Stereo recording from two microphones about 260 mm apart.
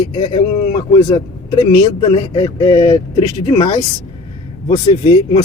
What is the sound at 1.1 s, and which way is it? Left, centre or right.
Speech, centre.